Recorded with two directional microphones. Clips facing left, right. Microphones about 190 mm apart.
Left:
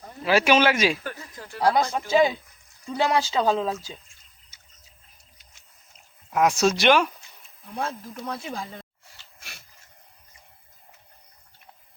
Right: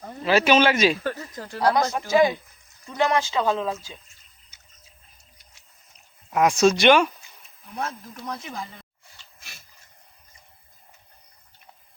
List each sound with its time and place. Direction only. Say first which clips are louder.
0.3 s speech: right 1 dB; 10° left (ahead or behind)
1.0 s a sound: right 6 dB; 40° right (ahead or behind)
1.6 s speech: even; 25° left (ahead or behind)
6.3 s speech: right 2 dB; centre (ahead or behind)
7.8 s speech: left 1 dB; 30° left (ahead or behind)